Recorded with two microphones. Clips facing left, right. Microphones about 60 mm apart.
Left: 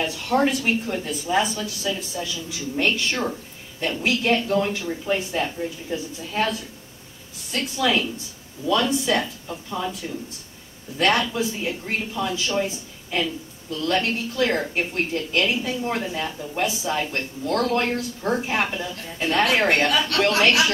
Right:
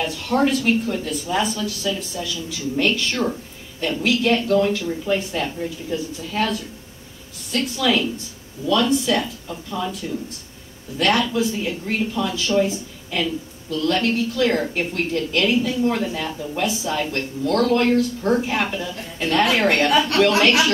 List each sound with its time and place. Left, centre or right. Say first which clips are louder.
0.0 s speech: right 1 dB; left
10.0 s speech: right 4 dB; centre
11.0 s a woman's voice: right 2 dB; left
19.9 s a woman's voice: right 4 dB; right